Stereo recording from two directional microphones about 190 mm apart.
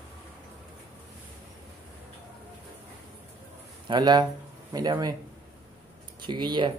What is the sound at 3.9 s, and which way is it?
Speech, 20° right (ahead or behind).